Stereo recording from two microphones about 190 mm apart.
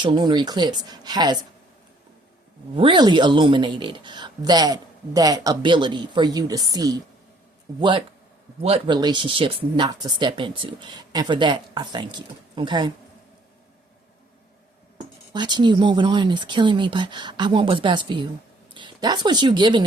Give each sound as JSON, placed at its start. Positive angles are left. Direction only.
{"t": 0.0, "sound": "speech", "side_deg": -25}
{"t": 2.7, "sound": "speech", "side_deg": -25}
{"t": 15.3, "sound": "speech", "side_deg": -25}